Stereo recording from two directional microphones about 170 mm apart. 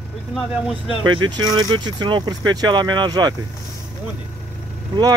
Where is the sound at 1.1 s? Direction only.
25° right (ahead or behind).